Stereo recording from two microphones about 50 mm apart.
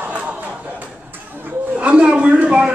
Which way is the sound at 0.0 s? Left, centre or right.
Right.